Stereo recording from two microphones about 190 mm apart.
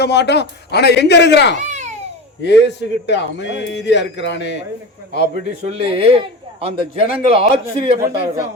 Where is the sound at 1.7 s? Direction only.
40° right (ahead or behind).